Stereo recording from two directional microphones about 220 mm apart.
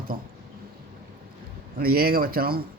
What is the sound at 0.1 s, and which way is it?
Speech, 45° right (ahead or behind).